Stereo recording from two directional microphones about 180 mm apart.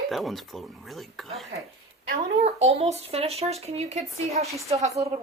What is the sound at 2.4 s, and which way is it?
A woman's voice, 35° right (ahead or behind).